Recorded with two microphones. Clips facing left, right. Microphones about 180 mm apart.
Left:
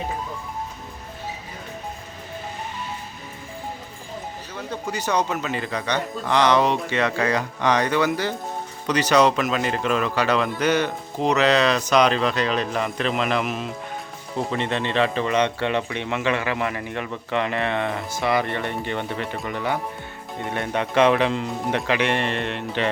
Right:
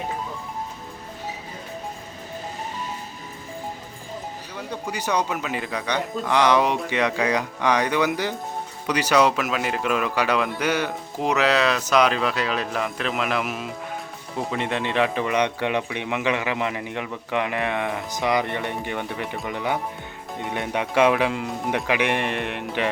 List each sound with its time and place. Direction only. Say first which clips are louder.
4.5 s speech: left 2 dB; 10° right (ahead or behind)